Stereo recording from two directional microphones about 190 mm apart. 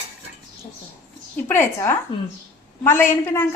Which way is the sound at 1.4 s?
10° left (ahead or behind).